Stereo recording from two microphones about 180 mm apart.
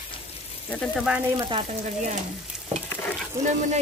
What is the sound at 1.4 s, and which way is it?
Speech, 30° right (ahead or behind).